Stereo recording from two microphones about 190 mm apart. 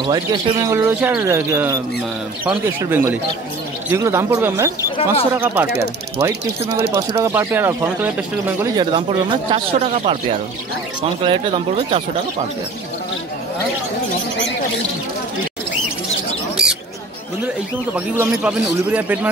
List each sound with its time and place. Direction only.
0.0 s speech: 20° right (ahead or behind)
2.9 s speech: 10° right (ahead or behind)
8.7 s a man's voice: 25° right (ahead or behind)
11.2 s a man's voice: 30° right (ahead or behind)
16.6 s mouse: 5° right (ahead or behind)
17.9 s speech: 10° right (ahead or behind)